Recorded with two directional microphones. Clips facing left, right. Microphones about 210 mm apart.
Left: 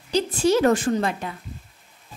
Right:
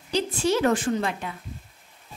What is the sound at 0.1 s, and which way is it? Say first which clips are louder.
A woman's voice: left 4 dB; 40° left (ahead or behind).